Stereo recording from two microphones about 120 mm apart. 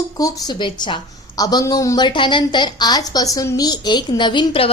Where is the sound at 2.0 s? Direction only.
40° left (ahead or behind).